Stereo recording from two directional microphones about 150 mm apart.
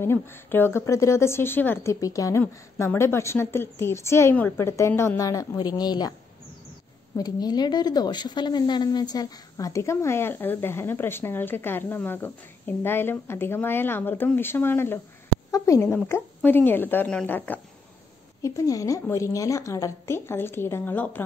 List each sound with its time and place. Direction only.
0.0 s a woman's voice: 15° left (ahead or behind)
7.2 s a woman's voice: 25° left (ahead or behind)
18.4 s a woman's voice: 20° left (ahead or behind)